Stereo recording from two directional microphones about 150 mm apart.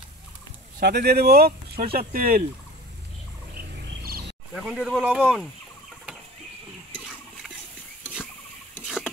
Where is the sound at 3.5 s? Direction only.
90° right.